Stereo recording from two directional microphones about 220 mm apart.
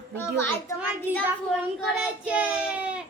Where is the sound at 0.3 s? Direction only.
10° left (ahead or behind).